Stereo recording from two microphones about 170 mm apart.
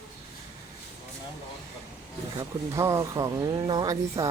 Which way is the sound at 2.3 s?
15° right (ahead or behind).